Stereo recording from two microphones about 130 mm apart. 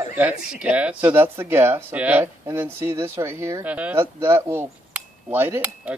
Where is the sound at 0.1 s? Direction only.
10° right (ahead or behind).